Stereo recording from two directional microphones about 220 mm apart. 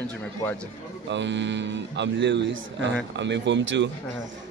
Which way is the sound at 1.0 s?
55° right (ahead or behind).